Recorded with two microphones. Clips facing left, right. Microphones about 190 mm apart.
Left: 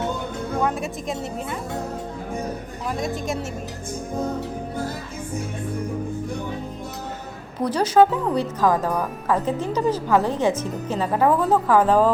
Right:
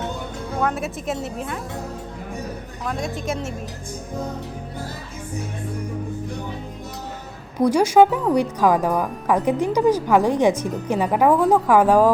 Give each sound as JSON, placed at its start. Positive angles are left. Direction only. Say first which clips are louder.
{"t": 0.6, "sound": "a woman's voice", "louder": "right 3 dB", "side_deg": 0}
{"t": 2.8, "sound": "a woman's voice", "louder": "even", "side_deg": 0}
{"t": 7.6, "sound": "speech", "louder": "right 3 dB", "side_deg": -10}